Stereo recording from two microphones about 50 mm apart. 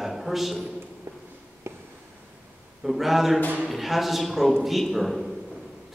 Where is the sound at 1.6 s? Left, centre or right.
Right.